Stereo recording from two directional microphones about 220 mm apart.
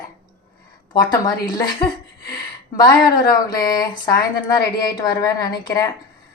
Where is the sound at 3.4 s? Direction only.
15° left (ahead or behind).